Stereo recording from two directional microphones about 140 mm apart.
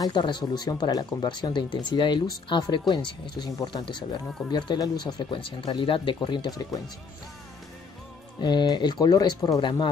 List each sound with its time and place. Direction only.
0.0 s speech: 30° left (ahead or behind)
8.4 s speech: 30° left (ahead or behind)